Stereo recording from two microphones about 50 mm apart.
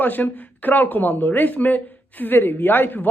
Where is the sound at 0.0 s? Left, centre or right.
Left.